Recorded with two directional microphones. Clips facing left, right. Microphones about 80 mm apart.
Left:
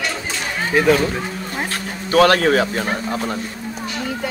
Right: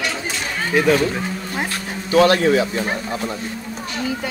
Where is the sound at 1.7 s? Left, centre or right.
Left.